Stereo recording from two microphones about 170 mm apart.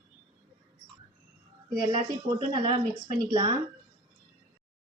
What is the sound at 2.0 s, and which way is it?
Speech, 25° right (ahead or behind).